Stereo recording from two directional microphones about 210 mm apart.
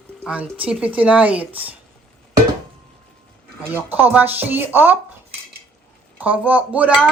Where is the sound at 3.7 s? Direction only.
10° right (ahead or behind).